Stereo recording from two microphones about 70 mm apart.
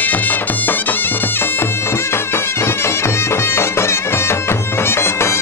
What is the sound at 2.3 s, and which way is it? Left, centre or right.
Music, left.